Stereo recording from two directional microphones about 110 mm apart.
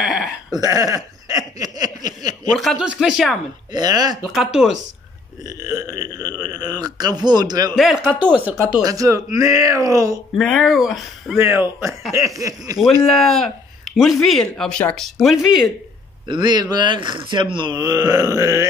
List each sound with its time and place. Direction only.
0.0 s a sound: centre (ahead or behind)
0.6 s a sound: 30° right (ahead or behind)
2.5 s speech: centre (ahead or behind)
3.7 s speech: 40° right (ahead or behind)
4.2 s speech: 5° right (ahead or behind)
5.4 s speech: 30° right (ahead or behind)
7.7 s speech: centre (ahead or behind)
8.8 s speech: 30° right (ahead or behind)
10.3 s speech: 5° left (ahead or behind)
11.3 s speech: 25° right (ahead or behind)
13.0 s speech: 5° left (ahead or behind)
16.3 s speech: 40° right (ahead or behind)
17.7 s speech: 35° right (ahead or behind)